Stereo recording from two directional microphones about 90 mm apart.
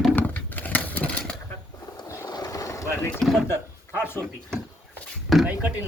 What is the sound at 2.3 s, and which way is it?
Vehicle, 45° left (ahead or behind).